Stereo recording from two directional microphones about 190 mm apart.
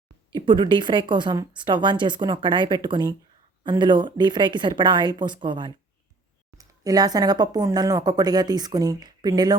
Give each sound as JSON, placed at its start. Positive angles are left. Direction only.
{"t": 0.3, "sound": "speech", "side_deg": -25}